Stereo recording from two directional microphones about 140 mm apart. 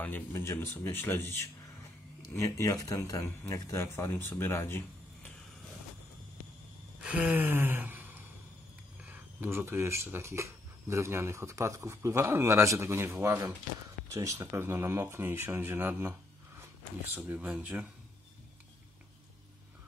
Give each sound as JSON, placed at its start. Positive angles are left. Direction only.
{"t": 0.0, "sound": "speech", "side_deg": 15}
{"t": 7.0, "sound": "gasp", "side_deg": -10}
{"t": 9.0, "sound": "speech", "side_deg": -15}